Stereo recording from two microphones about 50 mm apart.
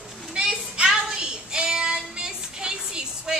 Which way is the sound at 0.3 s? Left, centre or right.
Centre.